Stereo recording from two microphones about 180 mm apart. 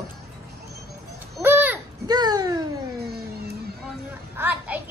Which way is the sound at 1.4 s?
10° right (ahead or behind).